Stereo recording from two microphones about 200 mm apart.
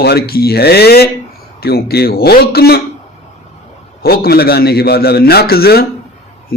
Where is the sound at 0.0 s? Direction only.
50° left (ahead or behind).